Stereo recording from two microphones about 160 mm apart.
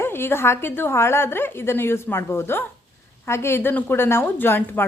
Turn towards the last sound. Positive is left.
turn(degrees=15)  # may be behind; listen again after turning